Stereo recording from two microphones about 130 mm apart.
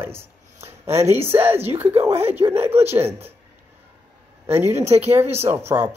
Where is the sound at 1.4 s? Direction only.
15° right (ahead or behind).